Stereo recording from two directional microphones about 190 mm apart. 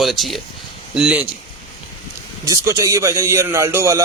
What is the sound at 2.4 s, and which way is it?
Speech, 15° right (ahead or behind).